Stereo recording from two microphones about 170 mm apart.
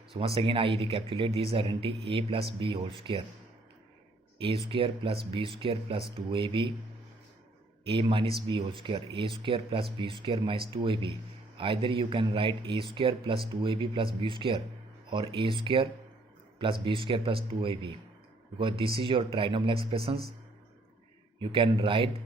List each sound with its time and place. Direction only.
0.3 s speech: 30° right (ahead or behind)
4.4 s speech: 30° right (ahead or behind)
7.9 s speech: 30° right (ahead or behind)
21.5 s speech: 30° right (ahead or behind)